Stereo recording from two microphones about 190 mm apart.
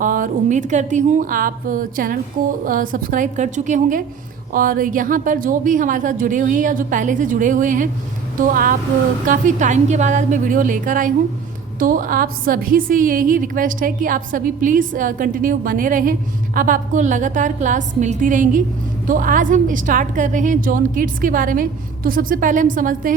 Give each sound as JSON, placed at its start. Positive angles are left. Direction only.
{"t": 0.0, "sound": "a woman's voice", "side_deg": -45}